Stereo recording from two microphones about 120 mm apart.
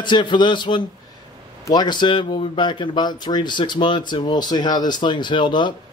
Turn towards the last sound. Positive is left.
turn(degrees=40)  # may be behind; listen again after turning